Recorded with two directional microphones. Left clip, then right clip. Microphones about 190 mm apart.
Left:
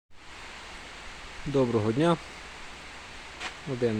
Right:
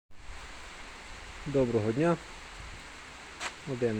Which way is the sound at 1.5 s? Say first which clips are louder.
Left 2 dB; 10° left (ahead or behind).